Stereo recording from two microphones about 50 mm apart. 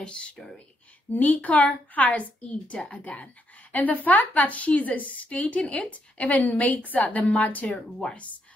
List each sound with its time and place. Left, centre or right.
0.0 s speech: left
1.1 s a woman's voice: left
7.7 s speech: centre